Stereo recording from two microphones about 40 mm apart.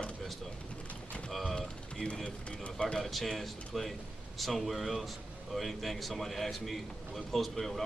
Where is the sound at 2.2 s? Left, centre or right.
Left.